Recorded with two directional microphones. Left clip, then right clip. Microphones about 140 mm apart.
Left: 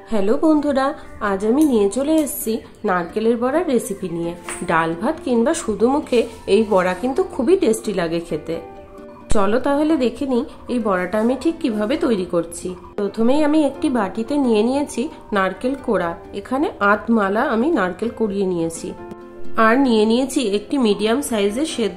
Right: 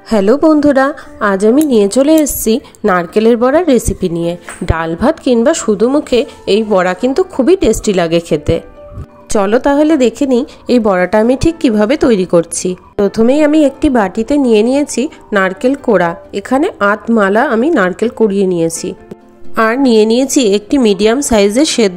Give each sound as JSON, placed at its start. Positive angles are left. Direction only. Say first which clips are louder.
{"t": 0.1, "sound": "a woman's voice", "louder": "right 9 dB", "side_deg": -60}
{"t": 0.6, "sound": "a woman's voice", "louder": "right 9 dB", "side_deg": -45}
{"t": 10.7, "sound": "a woman's voice", "louder": "right 11 dB", "side_deg": -55}
{"t": 19.5, "sound": "a woman's voice", "louder": "right 5 dB", "side_deg": -55}